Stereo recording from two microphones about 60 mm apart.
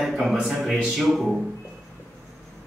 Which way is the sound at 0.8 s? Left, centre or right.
Centre.